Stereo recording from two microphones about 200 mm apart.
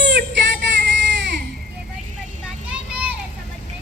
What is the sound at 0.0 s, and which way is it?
Child singing, 60° right (ahead or behind).